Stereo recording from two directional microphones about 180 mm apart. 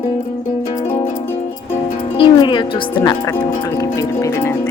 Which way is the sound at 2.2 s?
25° left (ahead or behind).